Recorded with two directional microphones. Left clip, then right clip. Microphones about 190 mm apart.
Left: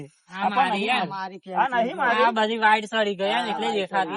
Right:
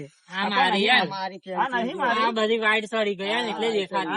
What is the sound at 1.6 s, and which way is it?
Speech, centre (ahead or behind).